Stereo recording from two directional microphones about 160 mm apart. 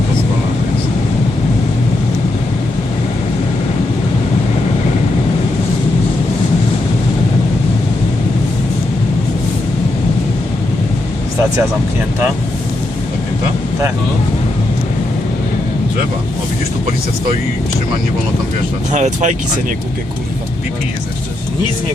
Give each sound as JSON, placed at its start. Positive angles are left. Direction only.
{"t": 18.9, "sound": "speech", "side_deg": -45}